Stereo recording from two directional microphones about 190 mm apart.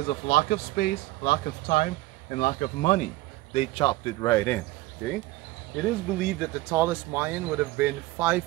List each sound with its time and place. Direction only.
0.3 s speech: 55° left (ahead or behind)
3.5 s speech: 25° left (ahead or behind); by 8.5 s 10° right (ahead or behind)